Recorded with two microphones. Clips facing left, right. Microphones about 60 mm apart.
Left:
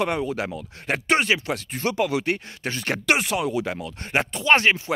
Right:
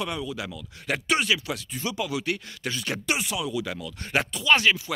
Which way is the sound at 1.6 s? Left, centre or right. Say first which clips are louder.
Left 8 dB; left.